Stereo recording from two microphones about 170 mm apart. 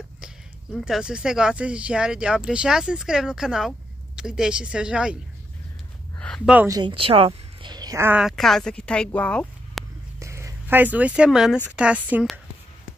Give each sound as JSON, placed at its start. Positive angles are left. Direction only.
{"t": 0.7, "sound": "speech", "side_deg": -5}
{"t": 6.1, "sound": "a sound", "side_deg": 5}
{"t": 6.4, "sound": "speech", "side_deg": -10}
{"t": 6.7, "sound": "a woman's voice", "side_deg": -25}
{"t": 8.2, "sound": "speech", "side_deg": 0}
{"t": 10.1, "sound": "a sound", "side_deg": -15}
{"t": 11.7, "sound": "speech", "side_deg": -5}